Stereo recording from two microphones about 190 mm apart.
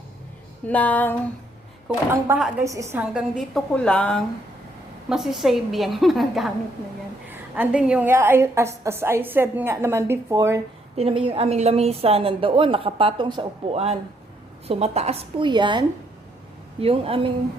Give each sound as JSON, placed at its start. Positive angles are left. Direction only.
{"t": 0.7, "sound": "speech", "side_deg": 10}
{"t": 2.3, "sound": "a woman's voice", "side_deg": -15}
{"t": 10.9, "sound": "a woman's voice", "side_deg": -30}
{"t": 16.8, "sound": "a woman's voice", "side_deg": -30}